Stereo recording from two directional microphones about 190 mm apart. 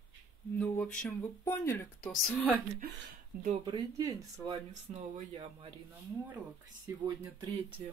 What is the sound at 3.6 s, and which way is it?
Speech, 25° right (ahead or behind).